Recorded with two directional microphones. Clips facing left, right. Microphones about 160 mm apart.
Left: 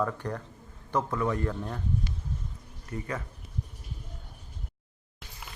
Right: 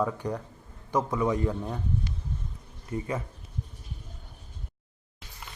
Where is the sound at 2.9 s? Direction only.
25° right (ahead or behind).